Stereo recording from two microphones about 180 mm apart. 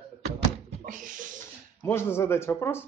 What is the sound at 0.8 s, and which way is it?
Speech, 45° right (ahead or behind).